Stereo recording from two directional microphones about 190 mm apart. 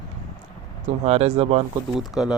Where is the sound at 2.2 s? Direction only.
5° right (ahead or behind).